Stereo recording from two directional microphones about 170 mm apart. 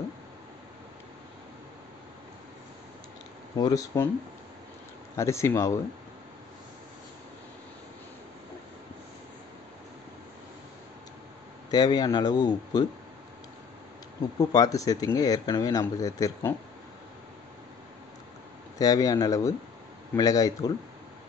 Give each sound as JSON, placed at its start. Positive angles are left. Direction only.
{"t": 3.5, "sound": "speech", "side_deg": 20}
{"t": 5.1, "sound": "speech", "side_deg": 15}
{"t": 11.7, "sound": "speech", "side_deg": 25}
{"t": 14.5, "sound": "speech", "side_deg": 20}
{"t": 18.8, "sound": "speech", "side_deg": 20}